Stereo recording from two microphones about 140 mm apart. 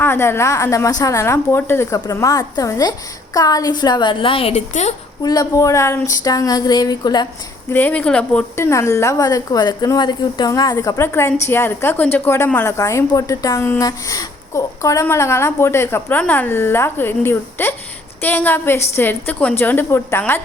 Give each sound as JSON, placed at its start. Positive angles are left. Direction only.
{"t": 0.0, "sound": "a woman's voice", "side_deg": 15}
{"t": 4.7, "sound": "a woman's voice", "side_deg": 55}
{"t": 5.2, "sound": "a woman's voice", "side_deg": 30}
{"t": 7.7, "sound": "a woman's voice", "side_deg": 15}